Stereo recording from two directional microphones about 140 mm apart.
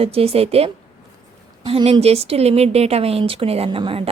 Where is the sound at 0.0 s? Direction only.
45° right (ahead or behind).